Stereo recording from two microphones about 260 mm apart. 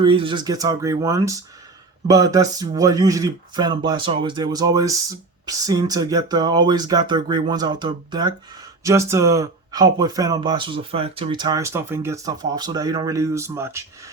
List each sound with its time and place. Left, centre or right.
0.0 s speech: centre